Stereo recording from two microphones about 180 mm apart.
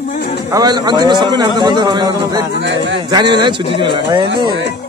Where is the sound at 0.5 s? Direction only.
25° right (ahead or behind).